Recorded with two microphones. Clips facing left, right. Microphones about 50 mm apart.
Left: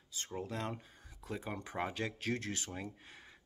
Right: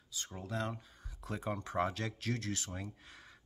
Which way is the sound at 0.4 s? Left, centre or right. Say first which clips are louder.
Right 1 dB; left.